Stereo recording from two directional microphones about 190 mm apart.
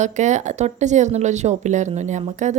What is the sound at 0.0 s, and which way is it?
Speech, 40° right (ahead or behind).